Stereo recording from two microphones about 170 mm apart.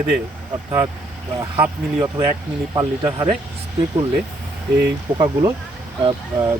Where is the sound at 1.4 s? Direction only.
15° right (ahead or behind).